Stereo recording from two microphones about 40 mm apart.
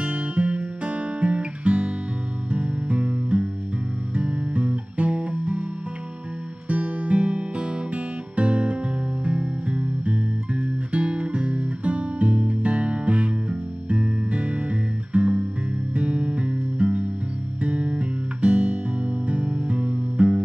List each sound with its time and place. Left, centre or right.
0.0 s music: right
6.7 s music: right